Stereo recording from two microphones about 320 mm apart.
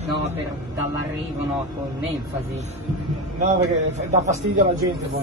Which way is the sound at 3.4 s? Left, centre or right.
Right.